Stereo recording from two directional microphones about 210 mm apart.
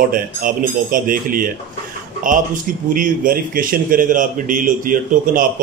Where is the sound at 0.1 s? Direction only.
40° right (ahead or behind).